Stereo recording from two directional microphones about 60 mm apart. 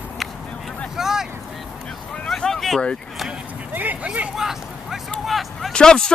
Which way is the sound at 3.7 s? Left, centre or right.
Right.